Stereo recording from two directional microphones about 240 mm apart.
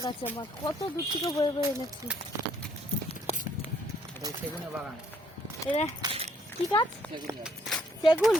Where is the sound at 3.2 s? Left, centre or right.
Left.